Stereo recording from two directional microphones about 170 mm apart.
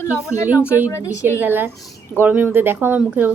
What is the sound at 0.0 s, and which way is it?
A woman's voice, 15° left (ahead or behind).